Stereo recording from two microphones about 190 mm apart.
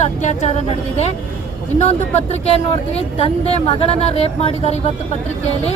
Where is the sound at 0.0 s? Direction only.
35° left (ahead or behind).